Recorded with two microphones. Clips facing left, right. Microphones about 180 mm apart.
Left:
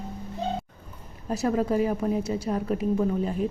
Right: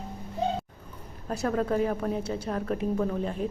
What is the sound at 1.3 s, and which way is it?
A woman's voice, 5° left (ahead or behind).